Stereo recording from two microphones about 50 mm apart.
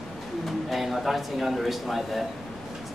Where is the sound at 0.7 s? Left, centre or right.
Centre.